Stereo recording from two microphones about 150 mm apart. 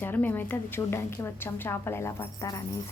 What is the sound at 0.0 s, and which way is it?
A woman's voice, 10° left (ahead or behind).